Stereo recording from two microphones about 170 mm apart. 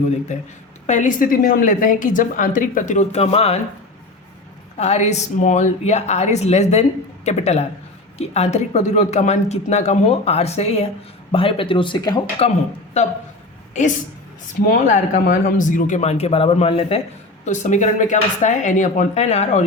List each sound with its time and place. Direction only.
0.3 s a woman's voice: 45° left (ahead or behind)
4.8 s speech: 40° left (ahead or behind); by 12.2 s 25° left (ahead or behind)
12.4 s speech: 35° left (ahead or behind)
14.7 s speech: 45° left (ahead or behind)
17.4 s a woman's voice: 45° left (ahead or behind)